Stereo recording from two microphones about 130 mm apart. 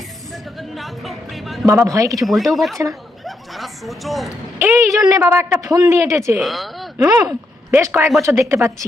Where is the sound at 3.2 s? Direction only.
Centre (ahead or behind).